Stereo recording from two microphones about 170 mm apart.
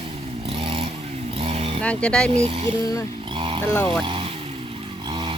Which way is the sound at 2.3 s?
35° right (ahead or behind).